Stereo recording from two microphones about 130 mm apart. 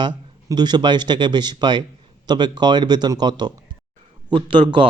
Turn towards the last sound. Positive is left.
turn(degrees=-40)  # may be behind; listen again after turning